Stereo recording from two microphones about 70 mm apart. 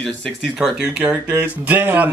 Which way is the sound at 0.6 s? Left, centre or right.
Centre.